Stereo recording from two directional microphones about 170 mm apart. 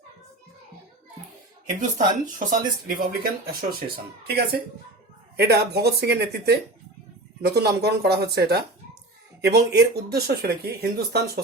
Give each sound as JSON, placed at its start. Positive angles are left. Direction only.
{"t": 1.8, "sound": "speech", "side_deg": -50}
{"t": 3.4, "sound": "speech", "side_deg": -65}